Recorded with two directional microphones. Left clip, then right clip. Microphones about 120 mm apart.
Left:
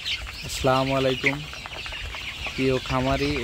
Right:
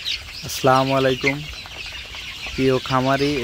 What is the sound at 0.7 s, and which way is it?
Speech, 20° right (ahead or behind).